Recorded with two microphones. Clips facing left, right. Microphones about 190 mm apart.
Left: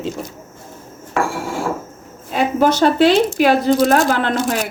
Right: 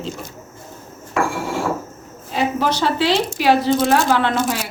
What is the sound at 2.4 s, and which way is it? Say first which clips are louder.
Speech: left 5 dB; 50° left (ahead or behind).